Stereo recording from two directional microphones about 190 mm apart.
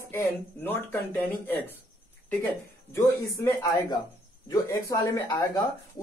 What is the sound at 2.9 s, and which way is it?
Speech, 15° left (ahead or behind).